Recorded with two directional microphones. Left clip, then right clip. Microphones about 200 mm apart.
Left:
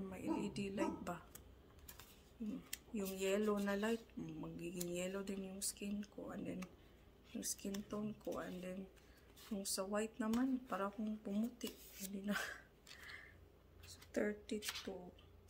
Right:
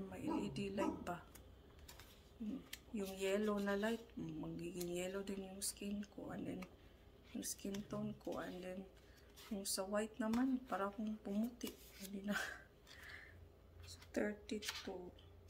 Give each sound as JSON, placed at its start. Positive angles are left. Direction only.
{"t": 0.1, "sound": "a sound", "side_deg": 10}
{"t": 2.7, "sound": "speech", "side_deg": 5}
{"t": 13.8, "sound": "speech", "side_deg": 10}